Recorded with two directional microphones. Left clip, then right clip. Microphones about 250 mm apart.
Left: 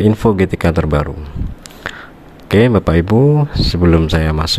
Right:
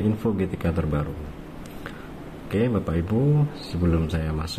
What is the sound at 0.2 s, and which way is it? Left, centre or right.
Speech, left.